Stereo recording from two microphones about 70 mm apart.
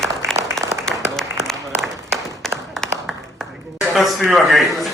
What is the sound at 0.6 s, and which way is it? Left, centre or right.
Applause, centre.